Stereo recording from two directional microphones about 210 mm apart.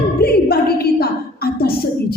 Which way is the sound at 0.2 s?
45° left (ahead or behind).